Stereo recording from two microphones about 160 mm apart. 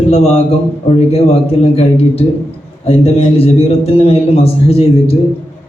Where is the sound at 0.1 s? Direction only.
45° left (ahead or behind).